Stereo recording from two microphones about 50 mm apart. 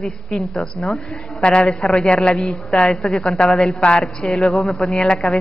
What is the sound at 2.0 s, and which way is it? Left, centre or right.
A woman's voice, centre.